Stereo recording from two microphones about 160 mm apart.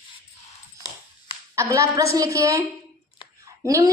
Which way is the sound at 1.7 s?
20° right (ahead or behind).